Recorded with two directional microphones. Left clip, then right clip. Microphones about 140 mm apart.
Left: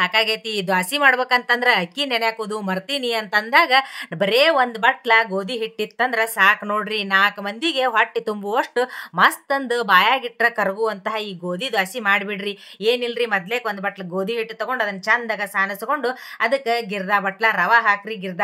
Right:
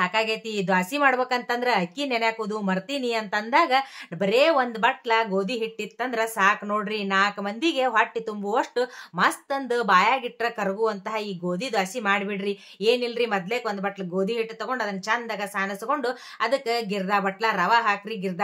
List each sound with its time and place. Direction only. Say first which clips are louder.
0.0 s a woman's voice: left 5 dB; 45° left (ahead or behind); by 18.3 s 25° left (ahead or behind)